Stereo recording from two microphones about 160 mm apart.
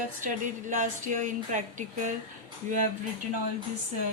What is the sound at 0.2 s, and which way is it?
A woman's voice, 55° right (ahead or behind).